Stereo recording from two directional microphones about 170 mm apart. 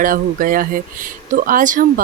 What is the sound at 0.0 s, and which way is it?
Speech, 55° right (ahead or behind).